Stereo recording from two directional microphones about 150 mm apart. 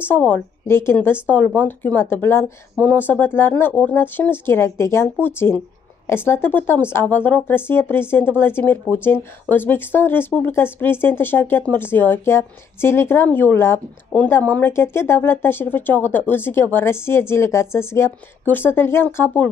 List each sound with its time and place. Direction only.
0.0 s speech: 10° left (ahead or behind)